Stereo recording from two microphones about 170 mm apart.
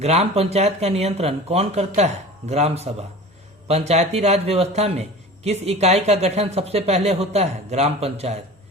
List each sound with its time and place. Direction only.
0.0 s a man's voice: 40° right (ahead or behind)